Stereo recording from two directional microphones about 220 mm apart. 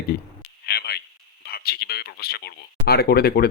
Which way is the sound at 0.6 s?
45° left (ahead or behind).